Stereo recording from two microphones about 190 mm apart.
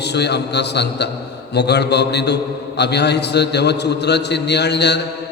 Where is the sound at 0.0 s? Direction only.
60° left (ahead or behind).